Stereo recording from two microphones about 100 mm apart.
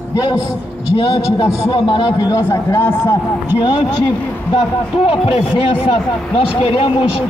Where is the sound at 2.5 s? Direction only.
20° left (ahead or behind).